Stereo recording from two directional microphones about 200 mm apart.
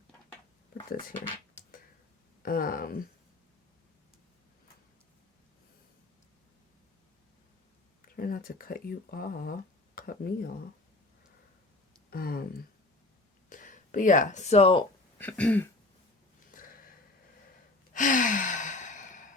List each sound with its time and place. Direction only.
0.7 s a sound: 50° left (ahead or behind)
2.4 s speech: 45° left (ahead or behind)
8.0 s speech: 45° left (ahead or behind)
12.1 s speech: 45° left (ahead or behind); by 14.8 s 30° left (ahead or behind)
15.2 s throat clearing: 5° left (ahead or behind)
17.9 s sigh: 40° left (ahead or behind)